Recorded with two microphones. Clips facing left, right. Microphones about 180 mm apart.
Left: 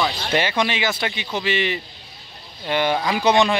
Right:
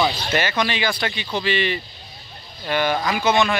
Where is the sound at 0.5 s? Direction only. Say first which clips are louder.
Left 1 dB; 20° left (ahead or behind).